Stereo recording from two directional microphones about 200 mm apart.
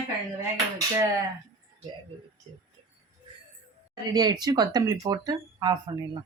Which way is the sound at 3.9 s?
20° right (ahead or behind).